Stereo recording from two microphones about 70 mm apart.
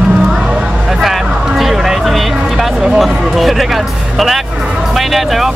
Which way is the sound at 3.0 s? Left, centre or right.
Centre.